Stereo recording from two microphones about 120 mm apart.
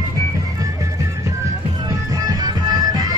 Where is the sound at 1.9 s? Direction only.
30° right (ahead or behind).